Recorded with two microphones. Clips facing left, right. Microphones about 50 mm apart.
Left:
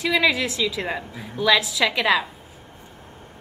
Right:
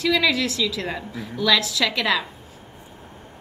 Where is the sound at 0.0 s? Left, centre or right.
Centre.